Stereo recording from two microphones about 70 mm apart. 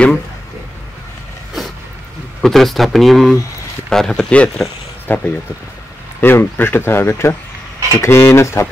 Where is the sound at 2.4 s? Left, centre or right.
Centre.